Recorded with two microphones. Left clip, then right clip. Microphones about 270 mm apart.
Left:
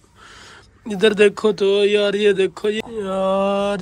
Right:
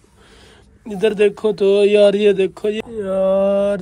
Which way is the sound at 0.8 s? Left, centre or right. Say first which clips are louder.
Left 1 dB; centre.